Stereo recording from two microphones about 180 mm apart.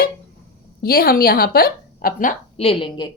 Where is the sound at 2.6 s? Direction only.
30° left (ahead or behind).